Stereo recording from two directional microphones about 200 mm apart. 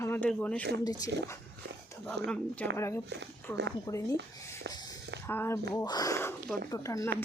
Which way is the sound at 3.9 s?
20° left (ahead or behind).